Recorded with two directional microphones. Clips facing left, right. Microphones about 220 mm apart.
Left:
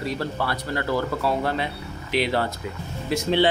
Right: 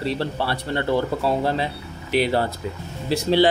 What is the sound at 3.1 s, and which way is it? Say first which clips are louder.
Speech: right 3 dB; 35° right (ahead or behind).